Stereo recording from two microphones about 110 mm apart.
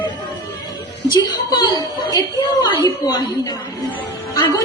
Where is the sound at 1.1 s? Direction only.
40° left (ahead or behind).